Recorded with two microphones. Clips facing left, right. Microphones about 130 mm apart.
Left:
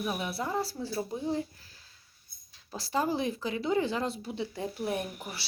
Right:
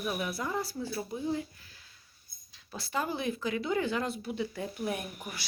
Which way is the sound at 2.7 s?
35° left (ahead or behind).